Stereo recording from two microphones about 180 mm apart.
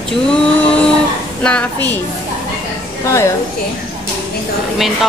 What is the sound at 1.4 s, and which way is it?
Speech, 10° left (ahead or behind).